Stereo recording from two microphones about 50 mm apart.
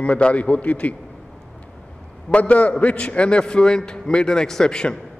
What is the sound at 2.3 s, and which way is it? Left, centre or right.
A man's voice, left.